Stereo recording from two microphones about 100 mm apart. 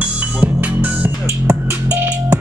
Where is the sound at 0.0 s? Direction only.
15° right (ahead or behind).